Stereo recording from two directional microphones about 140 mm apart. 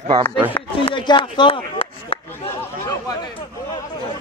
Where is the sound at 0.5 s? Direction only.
35° left (ahead or behind).